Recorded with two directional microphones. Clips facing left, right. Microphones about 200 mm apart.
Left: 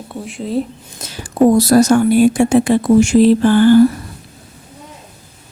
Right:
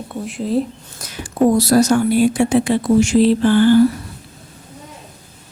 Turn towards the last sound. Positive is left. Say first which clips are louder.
# left 3 dB
turn(degrees=45)  # may be behind; listen again after turning